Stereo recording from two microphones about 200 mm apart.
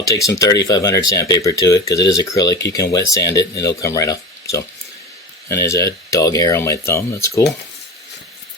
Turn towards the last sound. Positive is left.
turn(degrees=15)  # may be behind; listen again after turning